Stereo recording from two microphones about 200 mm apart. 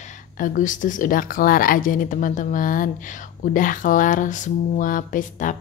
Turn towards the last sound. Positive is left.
turn(degrees=40)  # may be behind; listen again after turning